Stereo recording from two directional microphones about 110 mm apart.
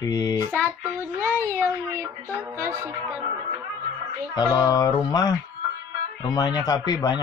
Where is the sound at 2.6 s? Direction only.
20° right (ahead or behind).